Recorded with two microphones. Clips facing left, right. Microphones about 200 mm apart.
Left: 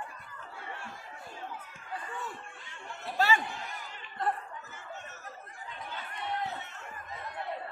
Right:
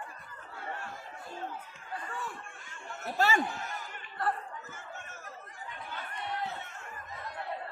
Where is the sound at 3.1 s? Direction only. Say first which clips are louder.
Even; 45° right (ahead or behind).